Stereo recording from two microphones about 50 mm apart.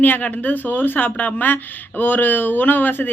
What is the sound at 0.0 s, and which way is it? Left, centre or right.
Speech, left.